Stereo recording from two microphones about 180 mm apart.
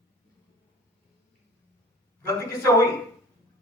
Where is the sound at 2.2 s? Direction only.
15° left (ahead or behind).